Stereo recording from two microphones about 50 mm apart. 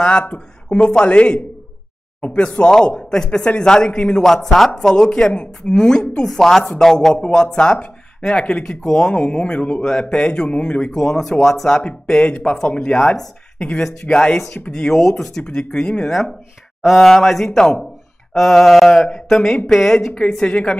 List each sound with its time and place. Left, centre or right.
0.7 s speech: centre
4.2 s speech: centre
10.9 s speech: centre
12.2 s speech: left
12.9 s speech: centre
15.1 s mantra: centre
15.4 s speech: centre
16.1 s mantra: centre
17.6 s speech: centre
18.3 s mantra: centre
19.7 s speech: centre